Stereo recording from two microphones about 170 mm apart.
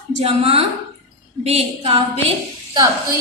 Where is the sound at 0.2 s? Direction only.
35° right (ahead or behind).